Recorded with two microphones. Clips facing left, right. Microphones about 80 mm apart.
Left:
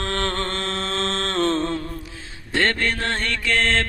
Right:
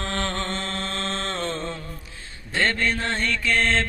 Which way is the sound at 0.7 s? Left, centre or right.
Left.